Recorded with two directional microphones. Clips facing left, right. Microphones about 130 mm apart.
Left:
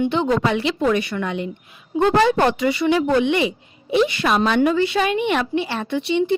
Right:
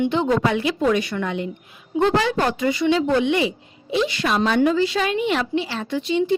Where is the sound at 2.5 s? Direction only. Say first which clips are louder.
Left 2 dB; 80° left.